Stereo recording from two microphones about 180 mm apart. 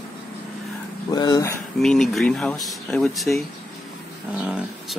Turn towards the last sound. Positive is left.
turn(degrees=-5)  # may be behind; listen again after turning